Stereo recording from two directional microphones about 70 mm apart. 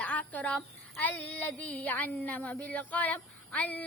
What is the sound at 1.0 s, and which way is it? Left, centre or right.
Female singing, left.